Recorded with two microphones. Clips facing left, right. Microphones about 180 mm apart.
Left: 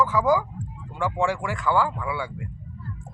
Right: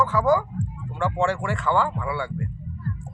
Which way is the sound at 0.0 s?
15° left (ahead or behind).